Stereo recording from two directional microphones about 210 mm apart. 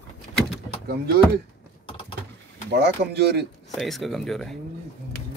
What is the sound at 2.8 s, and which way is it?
Speech, 50° right (ahead or behind).